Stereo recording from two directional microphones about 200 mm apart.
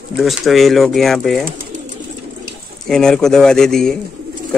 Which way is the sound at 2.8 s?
Centre (ahead or behind).